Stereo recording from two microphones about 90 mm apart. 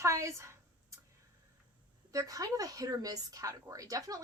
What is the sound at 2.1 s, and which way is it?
A woman's voice, 40° right (ahead or behind).